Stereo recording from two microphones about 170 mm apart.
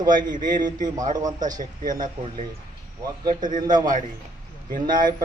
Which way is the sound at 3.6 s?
25° right (ahead or behind).